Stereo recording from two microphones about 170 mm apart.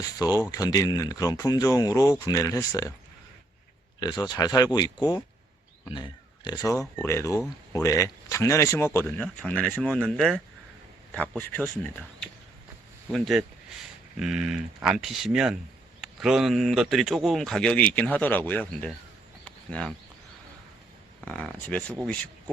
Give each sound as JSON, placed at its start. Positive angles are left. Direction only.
{"t": 0.0, "sound": "speech", "side_deg": 20}
{"t": 4.0, "sound": "speech", "side_deg": 25}
{"t": 19.5, "sound": "a sound", "side_deg": 5}
{"t": 21.2, "sound": "speech", "side_deg": 5}